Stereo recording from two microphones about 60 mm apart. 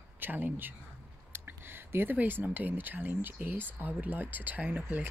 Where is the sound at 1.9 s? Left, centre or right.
Right.